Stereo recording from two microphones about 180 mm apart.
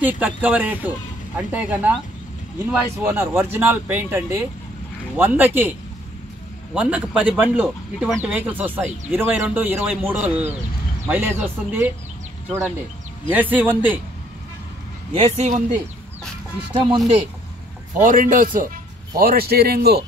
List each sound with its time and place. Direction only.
0.0 s speech: 10° right (ahead or behind)
6.7 s speech: 5° right (ahead or behind)
15.1 s speech: 30° right (ahead or behind)
18.0 s a man's voice: 50° right (ahead or behind)